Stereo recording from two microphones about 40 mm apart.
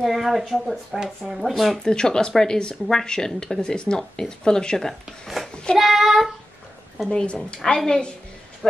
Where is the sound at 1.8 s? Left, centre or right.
Centre.